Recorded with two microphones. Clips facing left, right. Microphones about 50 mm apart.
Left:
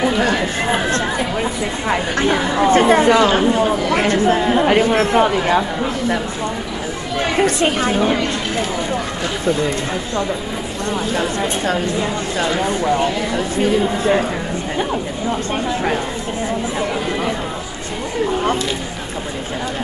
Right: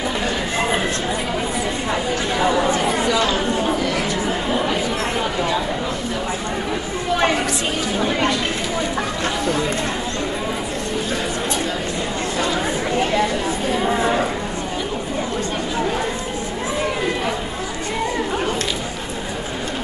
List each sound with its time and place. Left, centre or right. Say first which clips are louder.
1.9 s speech: left 8 dB; left
7.4 s speech: left 6 dB; left